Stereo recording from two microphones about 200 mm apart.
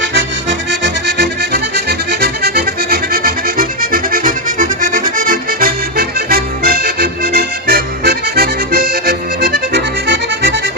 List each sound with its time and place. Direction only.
0.0 s accordion: 60° right (ahead or behind)